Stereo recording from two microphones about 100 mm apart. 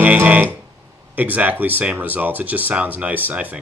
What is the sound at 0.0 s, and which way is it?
Speech, 15° right (ahead or behind).